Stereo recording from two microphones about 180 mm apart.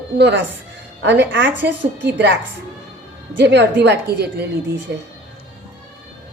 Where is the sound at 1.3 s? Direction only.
90° right.